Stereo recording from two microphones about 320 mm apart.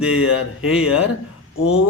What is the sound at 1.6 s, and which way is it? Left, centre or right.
Speech, left.